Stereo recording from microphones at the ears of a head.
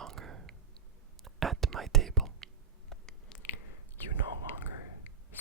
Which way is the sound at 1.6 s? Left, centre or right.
Right.